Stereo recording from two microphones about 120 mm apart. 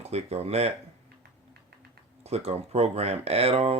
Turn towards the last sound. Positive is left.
turn(degrees=-55)  # may be behind; listen again after turning